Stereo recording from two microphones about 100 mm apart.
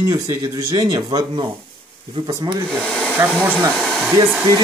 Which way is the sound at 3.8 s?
Centre (ahead or behind).